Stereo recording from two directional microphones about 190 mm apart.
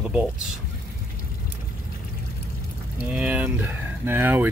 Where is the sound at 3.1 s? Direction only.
5° right (ahead or behind).